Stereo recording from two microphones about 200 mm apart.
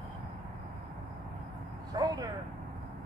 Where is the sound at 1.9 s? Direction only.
20° right (ahead or behind).